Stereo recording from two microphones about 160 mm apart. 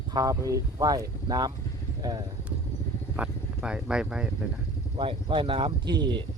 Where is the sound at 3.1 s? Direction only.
5° right (ahead or behind).